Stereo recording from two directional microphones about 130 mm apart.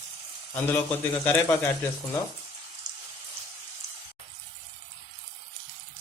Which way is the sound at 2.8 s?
30° right (ahead or behind).